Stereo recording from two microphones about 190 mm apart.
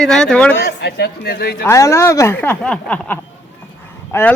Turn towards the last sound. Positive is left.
turn(degrees=15)  # may be behind; listen again after turning